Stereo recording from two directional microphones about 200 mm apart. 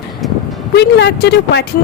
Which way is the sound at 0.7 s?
60° left (ahead or behind).